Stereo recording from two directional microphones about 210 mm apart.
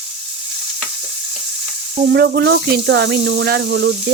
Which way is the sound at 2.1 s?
50° right (ahead or behind).